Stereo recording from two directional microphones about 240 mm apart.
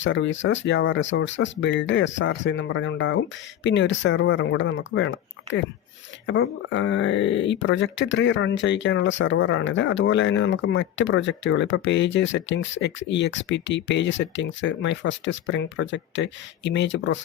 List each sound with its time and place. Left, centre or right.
0.0 s speech: left